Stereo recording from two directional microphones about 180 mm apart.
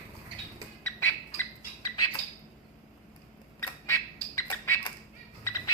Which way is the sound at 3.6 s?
15° left (ahead or behind).